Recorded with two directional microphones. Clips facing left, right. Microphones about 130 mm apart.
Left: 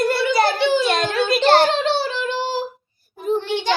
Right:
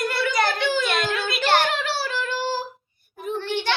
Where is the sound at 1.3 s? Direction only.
30° left (ahead or behind); by 2.6 s 15° left (ahead or behind).